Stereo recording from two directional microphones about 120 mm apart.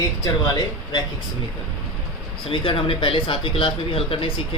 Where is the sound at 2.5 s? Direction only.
50° left (ahead or behind).